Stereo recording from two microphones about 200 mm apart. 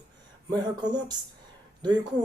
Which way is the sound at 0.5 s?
20° right (ahead or behind).